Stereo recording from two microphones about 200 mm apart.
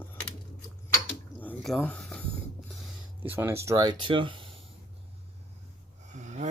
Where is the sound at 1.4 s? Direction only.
10° left (ahead or behind).